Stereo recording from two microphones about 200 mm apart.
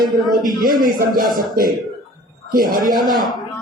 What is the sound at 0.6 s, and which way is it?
Speech, 45° right (ahead or behind).